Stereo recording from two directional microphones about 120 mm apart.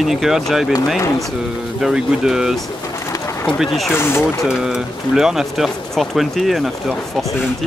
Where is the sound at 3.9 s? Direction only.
20° left (ahead or behind).